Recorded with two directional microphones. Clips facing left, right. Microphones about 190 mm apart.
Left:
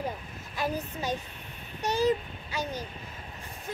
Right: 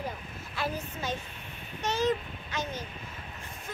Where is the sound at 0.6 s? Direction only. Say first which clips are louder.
Left 3 dB; 15° left (ahead or behind).